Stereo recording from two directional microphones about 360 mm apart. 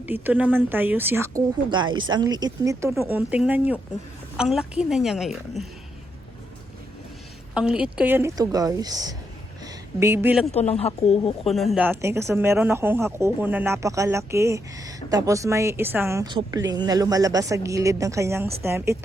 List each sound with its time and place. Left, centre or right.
0.0 s a woman's voice: centre
7.5 s a woman's voice: centre
10.5 s speech: centre
11.4 s speech: centre